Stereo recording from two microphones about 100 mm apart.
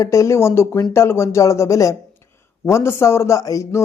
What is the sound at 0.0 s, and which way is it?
A man's voice, 30° left (ahead or behind).